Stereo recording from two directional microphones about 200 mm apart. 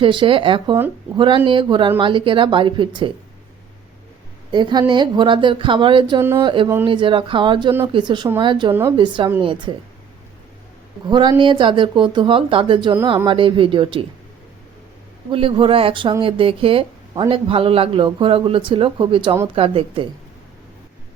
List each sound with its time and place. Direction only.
0.0 s speech: 25° right (ahead or behind)
4.5 s speech: 20° right (ahead or behind)
6.1 s speech: 15° right (ahead or behind)
6.4 s speech: 25° right (ahead or behind)
8.7 s speech: 10° right (ahead or behind)
9.0 s speech: 25° right (ahead or behind)
11.0 s speech: 20° right (ahead or behind)
15.3 s speech: 25° right (ahead or behind)